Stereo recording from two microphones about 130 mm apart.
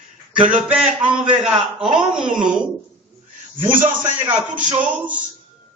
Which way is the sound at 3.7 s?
15° right (ahead or behind).